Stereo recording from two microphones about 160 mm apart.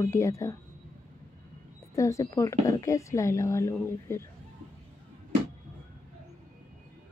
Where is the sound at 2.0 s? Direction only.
20° left (ahead or behind).